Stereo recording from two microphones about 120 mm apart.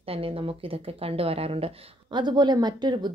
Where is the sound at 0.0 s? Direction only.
50° right (ahead or behind).